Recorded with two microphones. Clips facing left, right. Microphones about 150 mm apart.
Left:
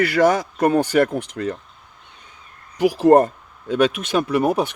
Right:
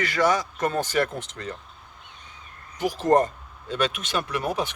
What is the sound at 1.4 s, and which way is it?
Speech, 80° left.